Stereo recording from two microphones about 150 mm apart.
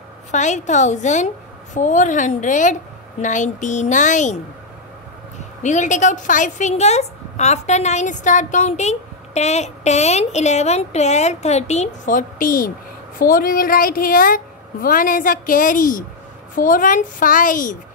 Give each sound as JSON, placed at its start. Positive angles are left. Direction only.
{"t": 0.3, "sound": "a woman's voice", "side_deg": 55}
{"t": 5.6, "sound": "a woman's voice", "side_deg": 55}